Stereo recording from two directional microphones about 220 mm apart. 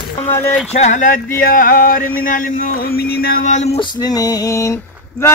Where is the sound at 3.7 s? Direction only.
20° left (ahead or behind).